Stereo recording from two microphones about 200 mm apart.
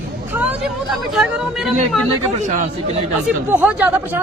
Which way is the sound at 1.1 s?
5° right (ahead or behind).